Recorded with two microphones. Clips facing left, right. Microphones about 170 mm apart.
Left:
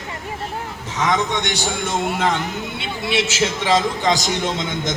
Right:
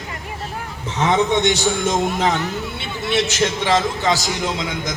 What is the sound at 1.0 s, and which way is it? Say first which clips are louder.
Speech: right 4 dB; 30° right (ahead or behind).